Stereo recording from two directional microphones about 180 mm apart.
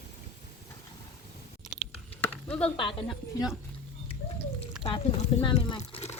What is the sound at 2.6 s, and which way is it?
Speech, 30° left (ahead or behind).